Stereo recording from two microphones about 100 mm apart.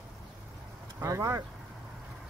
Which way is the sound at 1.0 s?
30° right (ahead or behind).